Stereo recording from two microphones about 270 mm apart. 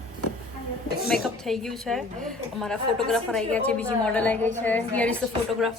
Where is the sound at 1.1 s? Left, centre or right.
Centre.